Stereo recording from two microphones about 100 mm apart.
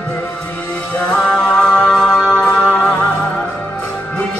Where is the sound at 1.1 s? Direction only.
5° left (ahead or behind).